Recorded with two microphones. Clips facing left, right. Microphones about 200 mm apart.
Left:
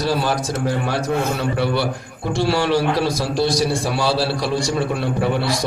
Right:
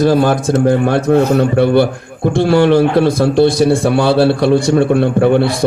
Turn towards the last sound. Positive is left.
turn(degrees=-55)  # may be behind; listen again after turning